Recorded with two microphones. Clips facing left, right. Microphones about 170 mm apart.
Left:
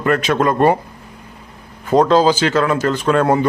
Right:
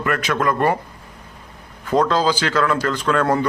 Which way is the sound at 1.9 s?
20° left (ahead or behind).